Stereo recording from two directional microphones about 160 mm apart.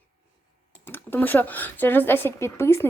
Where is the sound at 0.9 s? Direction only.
15° left (ahead or behind).